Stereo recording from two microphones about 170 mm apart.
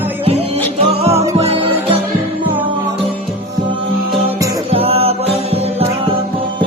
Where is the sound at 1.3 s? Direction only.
35° right (ahead or behind).